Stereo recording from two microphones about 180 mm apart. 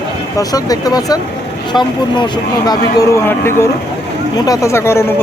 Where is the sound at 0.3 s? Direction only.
20° left (ahead or behind).